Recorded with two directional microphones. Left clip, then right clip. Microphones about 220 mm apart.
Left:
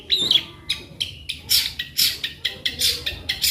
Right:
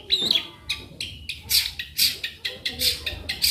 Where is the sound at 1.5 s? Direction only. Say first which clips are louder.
Left 2 dB; 10° left (ahead or behind).